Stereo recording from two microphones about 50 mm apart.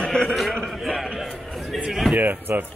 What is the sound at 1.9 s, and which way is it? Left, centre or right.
Speech, centre.